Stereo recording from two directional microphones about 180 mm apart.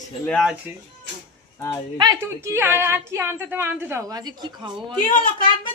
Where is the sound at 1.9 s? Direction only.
20° right (ahead or behind).